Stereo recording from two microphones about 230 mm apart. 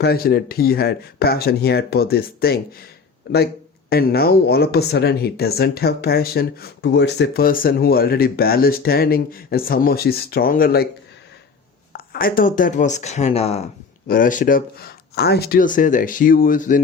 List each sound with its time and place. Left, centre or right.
0.0 s speech: left
11.9 s speech: left